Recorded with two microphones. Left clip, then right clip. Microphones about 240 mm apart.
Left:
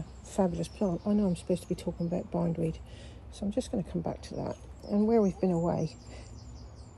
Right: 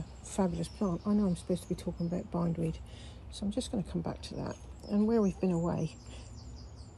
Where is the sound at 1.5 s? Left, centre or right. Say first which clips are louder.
Left 3 dB; left.